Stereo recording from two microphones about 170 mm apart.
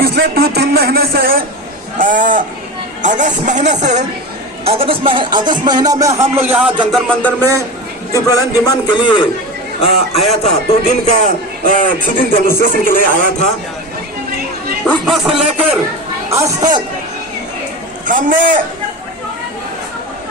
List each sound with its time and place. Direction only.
0.0 s a man's voice: 70° right (ahead or behind)
2.0 s speech: 50° right (ahead or behind); by 6.7 s 10° right (ahead or behind)
6.9 s music: 5° left (ahead or behind)
8.1 s a man's voice: 20° left (ahead or behind)
10.2 s a man's voice: 40° left (ahead or behind)
14.8 s a man's voice: centre (ahead or behind)
16.3 s speech: 25° right (ahead or behind)
18.0 s speech: 50° right (ahead or behind)